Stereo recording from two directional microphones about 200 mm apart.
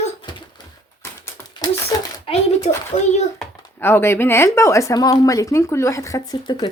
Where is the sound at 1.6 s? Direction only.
20° left (ahead or behind).